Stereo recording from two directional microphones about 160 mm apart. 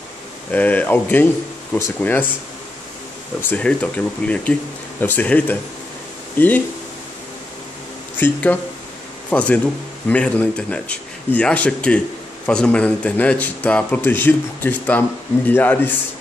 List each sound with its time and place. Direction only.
0.5 s a man's voice: 10° left (ahead or behind)
3.4 s a man's voice: 10° left (ahead or behind)
8.2 s a man's voice: 10° left (ahead or behind)